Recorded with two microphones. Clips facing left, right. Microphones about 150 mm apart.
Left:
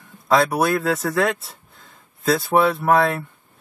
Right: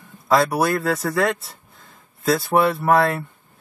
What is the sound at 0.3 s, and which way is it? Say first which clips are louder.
Speech: even; centre (ahead or behind).